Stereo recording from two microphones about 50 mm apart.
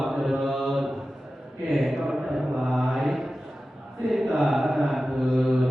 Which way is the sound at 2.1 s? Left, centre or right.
Centre.